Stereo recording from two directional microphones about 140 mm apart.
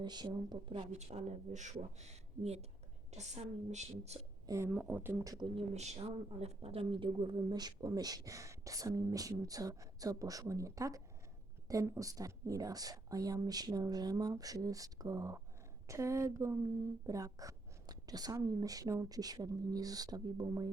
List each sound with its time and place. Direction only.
0.0 s speech: 30° right (ahead or behind)
0.9 s speech: 55° right (ahead or behind)
4.4 s speech: 20° right (ahead or behind)
4.7 s speech: 10° right (ahead or behind)
5.5 s speech: 50° right (ahead or behind); by 20.7 s 25° right (ahead or behind)